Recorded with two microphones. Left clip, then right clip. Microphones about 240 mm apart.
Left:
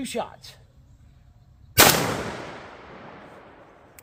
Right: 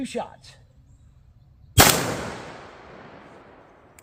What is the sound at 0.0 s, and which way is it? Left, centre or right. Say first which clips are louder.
Speech: left 1 dB; left.